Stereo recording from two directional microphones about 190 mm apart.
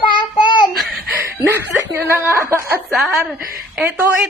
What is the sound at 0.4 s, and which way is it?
Child singing, 25° left (ahead or behind).